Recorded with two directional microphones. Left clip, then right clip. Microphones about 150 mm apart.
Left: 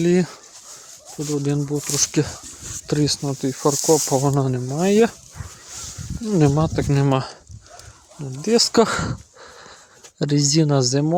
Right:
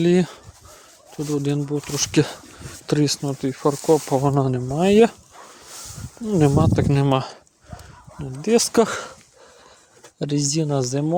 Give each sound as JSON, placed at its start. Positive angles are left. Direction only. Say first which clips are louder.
{"t": 0.0, "sound": "speech", "louder": "even", "side_deg": 0}
{"t": 6.3, "sound": "speech", "louder": "right 1 dB", "side_deg": 10}
{"t": 8.7, "sound": "speech", "louder": "left 2 dB", "side_deg": 20}
{"t": 10.2, "sound": "speech", "louder": "left 4 dB", "side_deg": 25}